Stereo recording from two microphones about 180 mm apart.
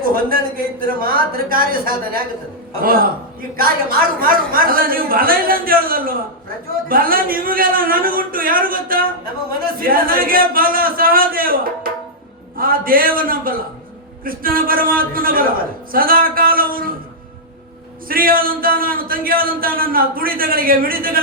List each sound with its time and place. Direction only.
0.0 s a man's voice: 55° right (ahead or behind)
18.1 s a man's voice: 55° right (ahead or behind)